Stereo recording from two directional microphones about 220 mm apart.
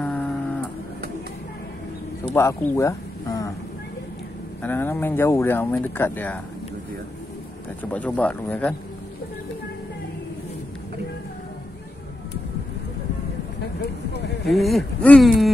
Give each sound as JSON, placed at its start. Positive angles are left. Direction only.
{"t": 0.0, "sound": "guitar", "side_deg": 5}
{"t": 2.2, "sound": "a sound", "side_deg": 10}
{"t": 4.6, "sound": "speech", "side_deg": 10}
{"t": 7.8, "sound": "speech", "side_deg": 5}
{"t": 14.1, "sound": "a sound", "side_deg": 50}
{"t": 14.5, "sound": "speech", "side_deg": 0}